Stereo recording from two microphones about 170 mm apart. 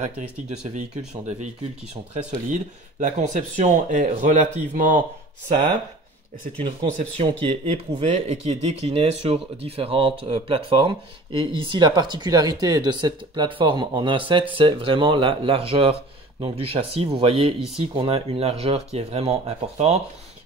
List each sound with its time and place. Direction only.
1.1 s speech: 40° right (ahead or behind)
2.5 s speech: 45° right (ahead or behind)
6.6 s speech: 35° right (ahead or behind)